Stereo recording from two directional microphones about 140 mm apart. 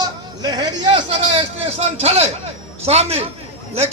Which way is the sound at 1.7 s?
45° right (ahead or behind).